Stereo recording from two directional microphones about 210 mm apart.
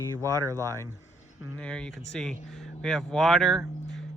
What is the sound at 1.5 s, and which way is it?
Speech, 5° left (ahead or behind).